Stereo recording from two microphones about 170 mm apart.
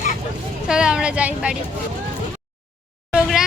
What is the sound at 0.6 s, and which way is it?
Speech, 5° right (ahead or behind).